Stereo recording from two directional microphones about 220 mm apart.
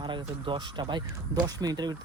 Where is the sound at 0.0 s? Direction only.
20° right (ahead or behind).